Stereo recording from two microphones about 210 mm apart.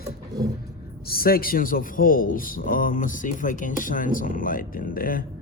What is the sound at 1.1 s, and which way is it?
A man's voice, 45° left (ahead or behind).